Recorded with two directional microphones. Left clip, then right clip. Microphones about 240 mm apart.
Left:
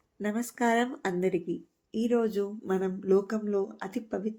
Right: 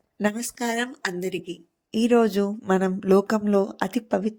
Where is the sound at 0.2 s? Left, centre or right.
Right.